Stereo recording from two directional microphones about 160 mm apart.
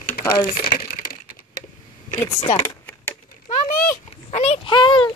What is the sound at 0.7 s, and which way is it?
Crushing, 65° left (ahead or behind).